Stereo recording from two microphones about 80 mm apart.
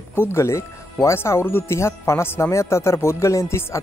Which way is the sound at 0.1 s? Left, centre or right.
Left.